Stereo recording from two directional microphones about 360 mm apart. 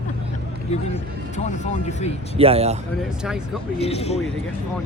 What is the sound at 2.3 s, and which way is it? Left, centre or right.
Speech, centre.